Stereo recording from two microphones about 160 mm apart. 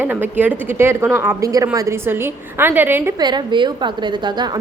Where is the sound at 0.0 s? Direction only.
10° right (ahead or behind).